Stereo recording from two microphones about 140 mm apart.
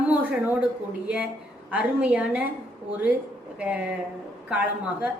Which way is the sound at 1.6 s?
10° right (ahead or behind).